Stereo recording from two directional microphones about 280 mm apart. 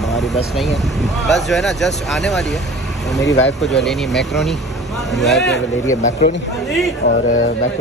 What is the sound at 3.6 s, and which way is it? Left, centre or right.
Speech, centre.